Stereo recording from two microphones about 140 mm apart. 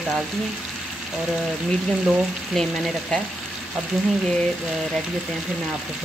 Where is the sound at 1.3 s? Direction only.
5° left (ahead or behind).